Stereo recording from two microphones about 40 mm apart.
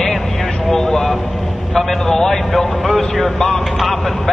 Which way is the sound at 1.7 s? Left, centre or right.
Centre.